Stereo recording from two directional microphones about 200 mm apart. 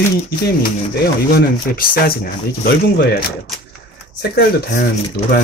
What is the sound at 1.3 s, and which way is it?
Speech, 50° left (ahead or behind).